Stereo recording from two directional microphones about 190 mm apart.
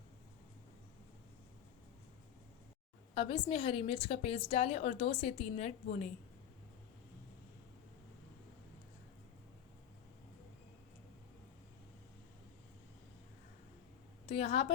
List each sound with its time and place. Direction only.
3.2 s a woman's voice: 30° left (ahead or behind)
14.3 s a woman's voice: 30° left (ahead or behind)